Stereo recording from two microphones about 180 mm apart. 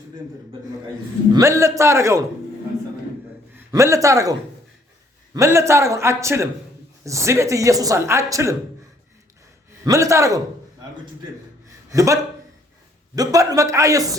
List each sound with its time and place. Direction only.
1.3 s speech: 15° right (ahead or behind)
3.5 s a man's voice: 15° right (ahead or behind)
9.8 s speech: 20° right (ahead or behind)
11.9 s a man's voice: 20° right (ahead or behind)